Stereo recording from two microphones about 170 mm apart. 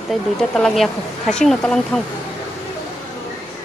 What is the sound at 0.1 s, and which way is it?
Speech, 5° left (ahead or behind).